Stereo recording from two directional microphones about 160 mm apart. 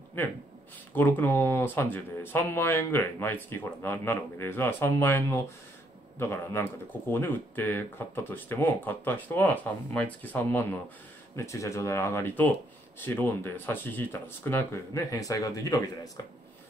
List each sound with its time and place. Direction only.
0.2 s speech: 10° left (ahead or behind)